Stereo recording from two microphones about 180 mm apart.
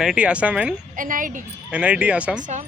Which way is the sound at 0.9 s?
50° right (ahead or behind).